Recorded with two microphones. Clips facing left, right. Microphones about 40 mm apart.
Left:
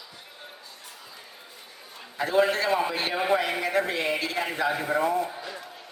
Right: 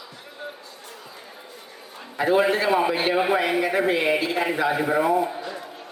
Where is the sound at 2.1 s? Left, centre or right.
Centre.